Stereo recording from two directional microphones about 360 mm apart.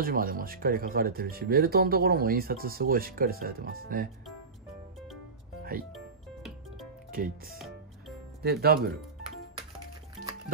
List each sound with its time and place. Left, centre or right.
0.0 s speech: right
5.9 s music: centre
7.1 s speech: right